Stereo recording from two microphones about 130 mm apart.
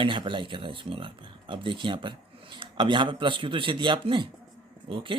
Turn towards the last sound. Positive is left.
turn(degrees=-40)  # may be behind; listen again after turning